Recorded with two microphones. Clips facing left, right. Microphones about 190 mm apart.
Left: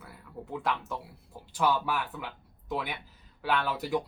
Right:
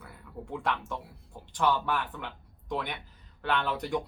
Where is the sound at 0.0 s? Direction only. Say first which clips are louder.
Even; 5° left (ahead or behind).